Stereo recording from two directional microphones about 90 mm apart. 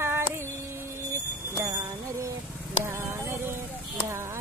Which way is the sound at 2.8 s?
25° right (ahead or behind).